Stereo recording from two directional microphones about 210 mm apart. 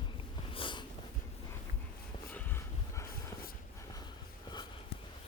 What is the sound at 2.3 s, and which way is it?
Dog, 10° left (ahead or behind).